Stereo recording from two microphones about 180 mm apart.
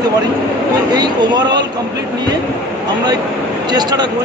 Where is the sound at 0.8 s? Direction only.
25° right (ahead or behind).